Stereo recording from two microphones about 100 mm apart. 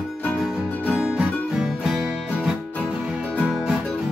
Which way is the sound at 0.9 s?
10° right (ahead or behind).